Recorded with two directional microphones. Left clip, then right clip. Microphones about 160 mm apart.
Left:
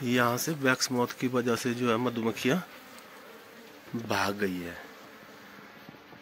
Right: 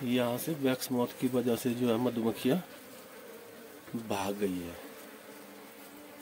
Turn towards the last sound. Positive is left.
turn(degrees=5)  # may be behind; listen again after turning